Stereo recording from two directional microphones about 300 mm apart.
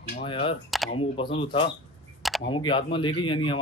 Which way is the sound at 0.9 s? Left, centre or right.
Centre.